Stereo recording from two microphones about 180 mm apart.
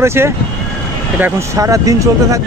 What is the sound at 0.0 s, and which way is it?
Speech, 15° right (ahead or behind).